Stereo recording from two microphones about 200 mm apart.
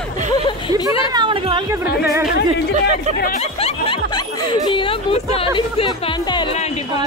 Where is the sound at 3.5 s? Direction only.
30° left (ahead or behind).